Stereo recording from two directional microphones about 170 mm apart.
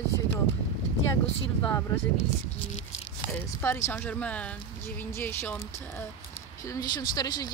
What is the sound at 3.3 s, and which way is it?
Speech, 15° left (ahead or behind).